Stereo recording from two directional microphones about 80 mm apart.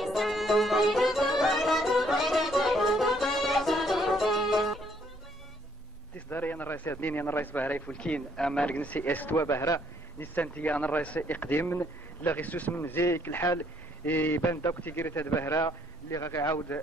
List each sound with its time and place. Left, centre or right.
0.0 s music: centre
6.1 s a sound: left
7.9 s speech: centre
9.4 s a man's voice: left
10.2 s a man's voice: left